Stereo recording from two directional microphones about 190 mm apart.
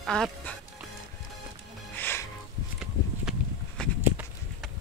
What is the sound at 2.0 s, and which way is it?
Music, 10° left (ahead or behind).